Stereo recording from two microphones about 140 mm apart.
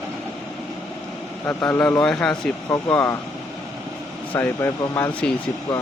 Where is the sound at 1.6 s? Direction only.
10° left (ahead or behind).